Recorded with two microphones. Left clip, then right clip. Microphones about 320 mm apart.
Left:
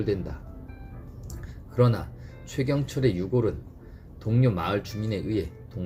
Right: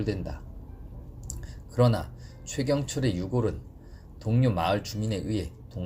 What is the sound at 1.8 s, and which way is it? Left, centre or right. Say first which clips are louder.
Speech: even; right.